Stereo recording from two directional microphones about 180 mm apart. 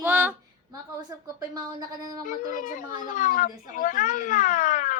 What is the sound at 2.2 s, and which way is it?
Speech, 45° left (ahead or behind).